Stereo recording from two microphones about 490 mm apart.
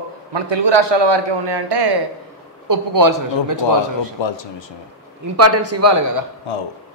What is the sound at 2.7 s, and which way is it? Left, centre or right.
Speech, right.